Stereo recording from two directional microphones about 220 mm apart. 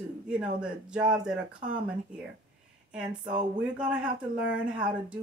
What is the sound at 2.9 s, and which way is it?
Speech, 5° right (ahead or behind).